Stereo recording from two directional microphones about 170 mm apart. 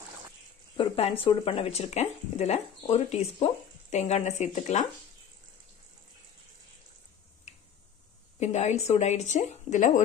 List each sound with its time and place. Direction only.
0.7 s speech: 35° left (ahead or behind)
7.5 s tick-tock: 40° left (ahead or behind)
8.4 s speech: 40° left (ahead or behind)